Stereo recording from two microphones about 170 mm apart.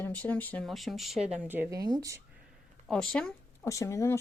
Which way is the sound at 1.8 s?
25° right (ahead or behind).